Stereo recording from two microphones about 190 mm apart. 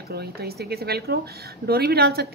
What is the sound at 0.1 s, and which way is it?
Speech, 55° right (ahead or behind).